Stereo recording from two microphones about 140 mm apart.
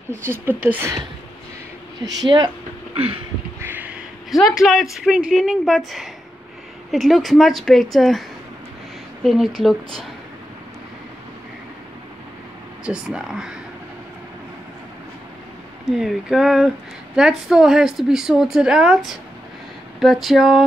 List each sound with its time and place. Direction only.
0.1 s speech: 15° right (ahead or behind)
2.0 s speech: 30° right (ahead or behind)
3.6 s a sound: 10° right (ahead or behind)
4.3 s speech: centre (ahead or behind)
9.2 s speech: centre (ahead or behind)
12.8 s speech: 5° right (ahead or behind)
15.8 s speech: centre (ahead or behind)